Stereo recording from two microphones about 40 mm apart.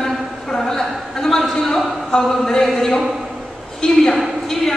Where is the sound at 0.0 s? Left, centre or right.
Centre.